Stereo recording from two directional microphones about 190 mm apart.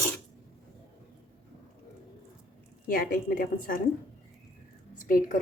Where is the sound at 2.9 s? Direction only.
45° left (ahead or behind).